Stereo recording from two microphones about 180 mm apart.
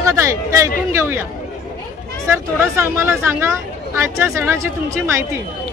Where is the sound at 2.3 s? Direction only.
15° right (ahead or behind).